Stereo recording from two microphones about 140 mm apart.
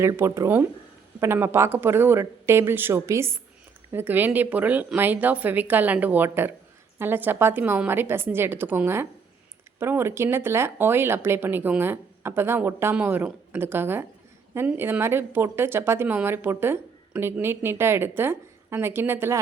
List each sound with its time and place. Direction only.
0.0 s a woman's voice: 20° right (ahead or behind)